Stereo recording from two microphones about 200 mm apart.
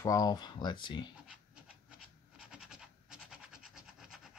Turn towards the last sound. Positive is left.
turn(degrees=0)  # may be behind; listen again after turning